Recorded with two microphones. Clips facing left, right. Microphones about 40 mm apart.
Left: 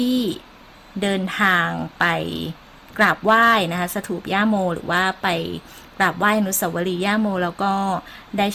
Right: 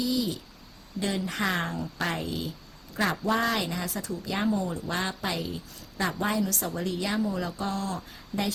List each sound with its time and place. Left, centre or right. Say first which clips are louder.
0.0 s speech: left 8 dB; left